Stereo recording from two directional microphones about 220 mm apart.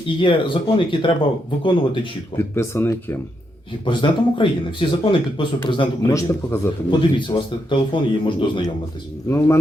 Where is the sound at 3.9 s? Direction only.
20° left (ahead or behind).